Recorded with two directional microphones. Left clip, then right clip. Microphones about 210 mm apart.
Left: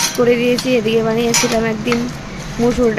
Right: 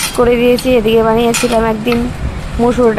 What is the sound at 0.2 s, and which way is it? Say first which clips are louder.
Speech: right 5 dB; 5° right (ahead or behind).